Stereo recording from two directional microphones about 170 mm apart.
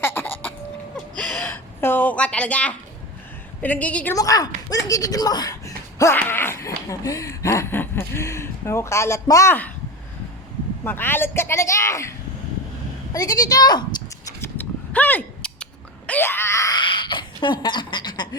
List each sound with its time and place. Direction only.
0.0 s a sound: 15° left (ahead or behind)
1.2 s gasp: 10° left (ahead or behind)
3.6 s speech: 10° left (ahead or behind)
4.1 s speech: 20° left (ahead or behind)
10.8 s speech: 10° left (ahead or behind)
13.1 s speech: 20° left (ahead or behind)
14.4 s a sound: 10° left (ahead or behind); by 18.3 s 25° left (ahead or behind)